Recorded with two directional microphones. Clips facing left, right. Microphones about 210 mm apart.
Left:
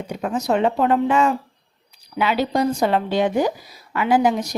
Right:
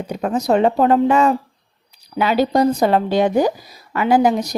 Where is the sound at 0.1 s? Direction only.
40° right (ahead or behind).